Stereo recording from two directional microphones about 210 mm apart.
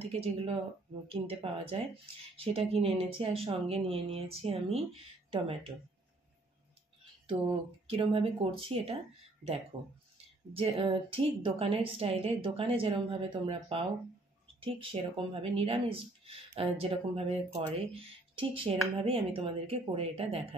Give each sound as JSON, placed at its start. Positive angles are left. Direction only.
{"t": 0.0, "sound": "speech", "side_deg": -25}
{"t": 7.8, "sound": "speech", "side_deg": -25}
{"t": 10.6, "sound": "speech", "side_deg": -25}